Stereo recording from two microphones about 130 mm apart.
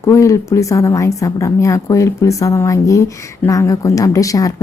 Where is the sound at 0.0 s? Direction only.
25° left (ahead or behind).